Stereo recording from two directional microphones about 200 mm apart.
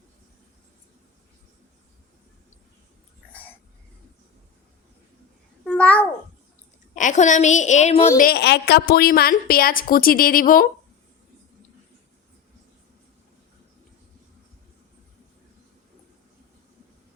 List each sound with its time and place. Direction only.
5.6 s babbling: 5° left (ahead or behind)
6.9 s a woman's voice: 40° left (ahead or behind)
8.1 s a woman's voice: 45° left (ahead or behind)